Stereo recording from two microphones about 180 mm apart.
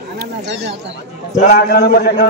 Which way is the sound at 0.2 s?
65° right (ahead or behind).